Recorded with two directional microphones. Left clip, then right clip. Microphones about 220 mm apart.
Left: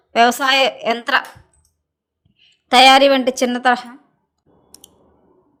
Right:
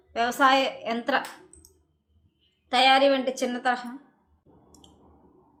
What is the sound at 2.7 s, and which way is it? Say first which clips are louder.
Speech: left 10 dB; 50° left (ahead or behind).